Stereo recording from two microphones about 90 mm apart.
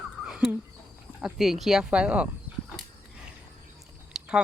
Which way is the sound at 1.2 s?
5° right (ahead or behind).